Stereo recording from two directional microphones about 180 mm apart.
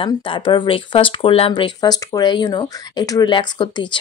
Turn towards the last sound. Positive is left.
turn(degrees=25)  # may be behind; listen again after turning